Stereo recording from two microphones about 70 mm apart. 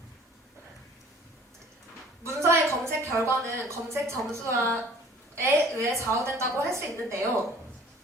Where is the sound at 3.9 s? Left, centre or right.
Right.